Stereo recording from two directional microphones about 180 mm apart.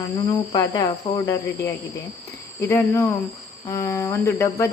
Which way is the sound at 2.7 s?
10° left (ahead or behind).